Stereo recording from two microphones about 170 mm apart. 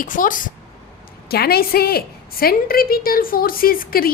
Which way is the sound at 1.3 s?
65° left (ahead or behind).